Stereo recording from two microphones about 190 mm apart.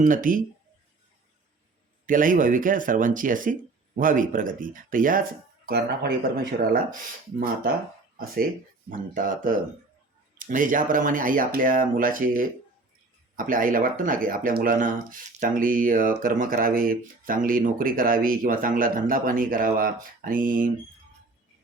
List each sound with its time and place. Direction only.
0.0 s speech: 45° right (ahead or behind)
2.0 s speech: 45° right (ahead or behind)
5.6 s speech: 55° right (ahead or behind)
6.9 s speech: 45° right (ahead or behind)
8.9 s speech: 45° right (ahead or behind)